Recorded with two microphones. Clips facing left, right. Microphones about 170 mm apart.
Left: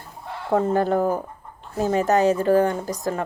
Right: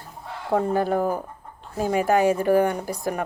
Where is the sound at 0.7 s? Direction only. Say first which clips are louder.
Left 2 dB; 10° right (ahead or behind).